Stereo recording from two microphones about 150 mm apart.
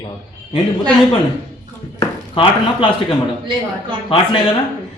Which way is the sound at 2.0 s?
35° left (ahead or behind).